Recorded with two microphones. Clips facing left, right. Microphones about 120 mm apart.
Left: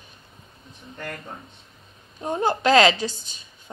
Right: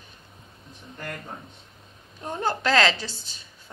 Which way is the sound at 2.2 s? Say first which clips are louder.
Left 5 dB; 15° left (ahead or behind).